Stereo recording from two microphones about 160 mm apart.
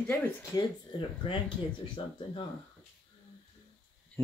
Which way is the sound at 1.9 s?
30° left (ahead or behind).